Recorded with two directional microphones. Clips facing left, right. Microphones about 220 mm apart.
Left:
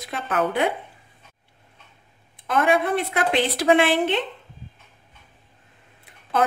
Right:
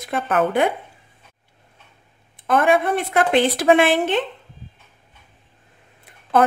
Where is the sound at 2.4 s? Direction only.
50° right (ahead or behind).